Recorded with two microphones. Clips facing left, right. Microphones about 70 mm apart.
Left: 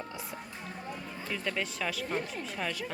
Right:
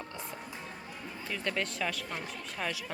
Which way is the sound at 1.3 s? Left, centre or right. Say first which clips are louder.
Even; centre.